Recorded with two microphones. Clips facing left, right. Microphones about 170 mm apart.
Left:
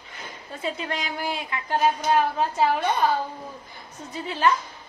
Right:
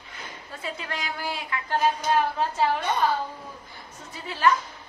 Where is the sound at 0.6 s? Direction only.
20° left (ahead or behind).